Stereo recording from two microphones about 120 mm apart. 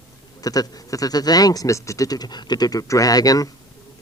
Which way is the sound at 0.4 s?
30° left (ahead or behind).